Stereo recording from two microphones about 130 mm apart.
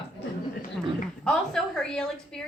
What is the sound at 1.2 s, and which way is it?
A woman's voice, 5° left (ahead or behind).